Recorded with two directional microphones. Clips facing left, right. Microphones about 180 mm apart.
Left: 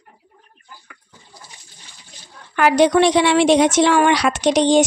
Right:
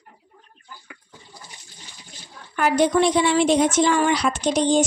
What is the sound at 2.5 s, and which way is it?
A woman's voice, 85° left.